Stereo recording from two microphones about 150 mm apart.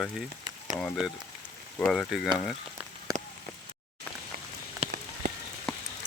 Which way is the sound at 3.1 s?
25° right (ahead or behind).